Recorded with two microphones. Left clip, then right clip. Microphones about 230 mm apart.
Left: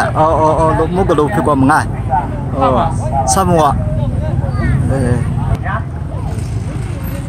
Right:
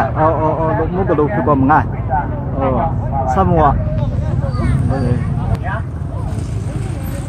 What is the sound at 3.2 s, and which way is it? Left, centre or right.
Speech, centre.